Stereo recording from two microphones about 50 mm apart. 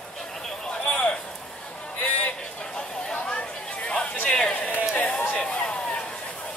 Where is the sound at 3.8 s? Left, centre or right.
Left.